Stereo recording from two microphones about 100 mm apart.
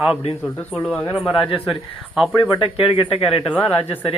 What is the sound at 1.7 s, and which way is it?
Speech, 5° right (ahead or behind).